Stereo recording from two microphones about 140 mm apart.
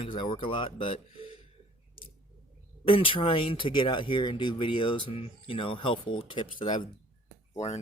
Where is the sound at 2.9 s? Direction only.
40° left (ahead or behind).